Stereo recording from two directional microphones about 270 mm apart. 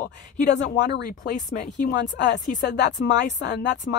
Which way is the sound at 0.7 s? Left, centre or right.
Left.